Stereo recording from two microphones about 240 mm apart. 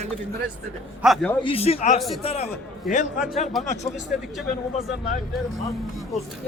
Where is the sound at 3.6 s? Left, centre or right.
Centre.